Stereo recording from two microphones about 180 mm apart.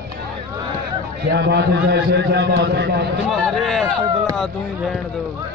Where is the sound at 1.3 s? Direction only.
70° right (ahead or behind).